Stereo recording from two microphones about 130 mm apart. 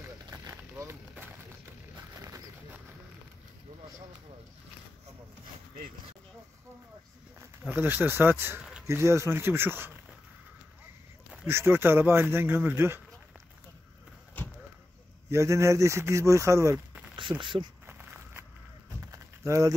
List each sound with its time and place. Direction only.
0.3 s vehicle: 20° right (ahead or behind)
7.3 s speech: 15° right (ahead or behind)
11.4 s speech: 15° right (ahead or behind)
15.2 s speech: 25° right (ahead or behind)
17.2 s speech: 40° right (ahead or behind)
17.8 s a sound: 20° right (ahead or behind)